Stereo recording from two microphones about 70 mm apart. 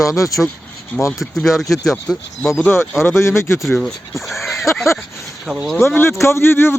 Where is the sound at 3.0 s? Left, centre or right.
Left.